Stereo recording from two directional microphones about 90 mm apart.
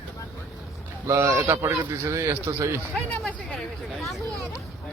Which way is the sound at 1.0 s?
30° right (ahead or behind).